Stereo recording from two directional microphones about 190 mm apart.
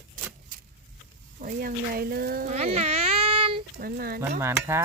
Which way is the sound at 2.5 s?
35° right (ahead or behind).